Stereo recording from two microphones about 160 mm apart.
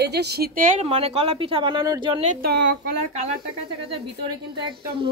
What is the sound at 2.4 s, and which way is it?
Speech, 85° right.